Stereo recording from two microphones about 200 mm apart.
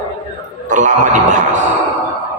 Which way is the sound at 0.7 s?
40° right (ahead or behind).